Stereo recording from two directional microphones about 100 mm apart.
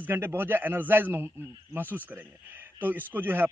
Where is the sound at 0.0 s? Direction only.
20° right (ahead or behind).